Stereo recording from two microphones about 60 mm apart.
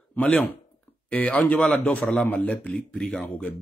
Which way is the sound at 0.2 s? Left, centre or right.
Left.